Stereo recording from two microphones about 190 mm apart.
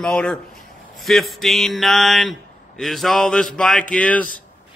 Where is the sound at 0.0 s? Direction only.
5° left (ahead or behind).